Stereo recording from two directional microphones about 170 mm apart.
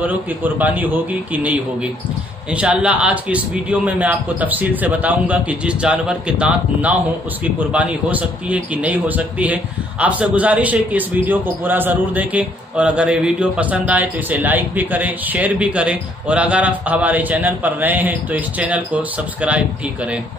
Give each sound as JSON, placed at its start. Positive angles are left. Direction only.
{"t": 0.0, "sound": "a man's voice", "side_deg": -10}